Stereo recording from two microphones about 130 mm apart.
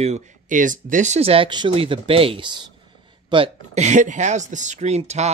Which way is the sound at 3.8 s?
65° right (ahead or behind).